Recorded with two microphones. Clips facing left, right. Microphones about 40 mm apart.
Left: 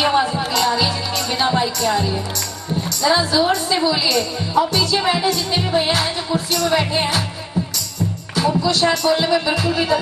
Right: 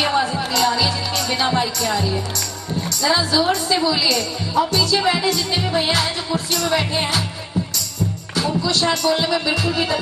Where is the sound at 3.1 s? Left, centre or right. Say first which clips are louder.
Left 2 dB; centre.